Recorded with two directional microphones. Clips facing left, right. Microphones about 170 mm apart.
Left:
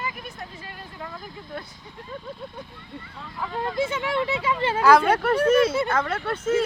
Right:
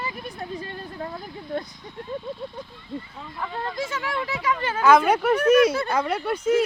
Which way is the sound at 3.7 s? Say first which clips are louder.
Left 4 dB; 25° left (ahead or behind).